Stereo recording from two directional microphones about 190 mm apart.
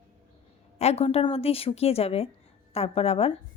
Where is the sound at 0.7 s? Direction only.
35° left (ahead or behind).